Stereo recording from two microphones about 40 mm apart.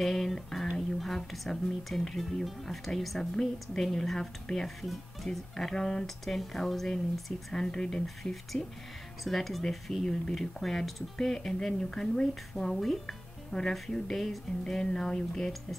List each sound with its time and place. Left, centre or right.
0.0 s speech: centre
5.7 s speech: centre
6.0 s speech: centre
14.7 s speech: centre